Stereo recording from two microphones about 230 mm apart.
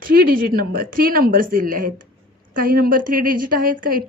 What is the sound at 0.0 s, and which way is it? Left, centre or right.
A woman's voice, right.